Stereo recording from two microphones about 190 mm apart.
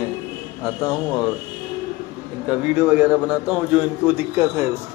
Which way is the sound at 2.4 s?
5° right (ahead or behind).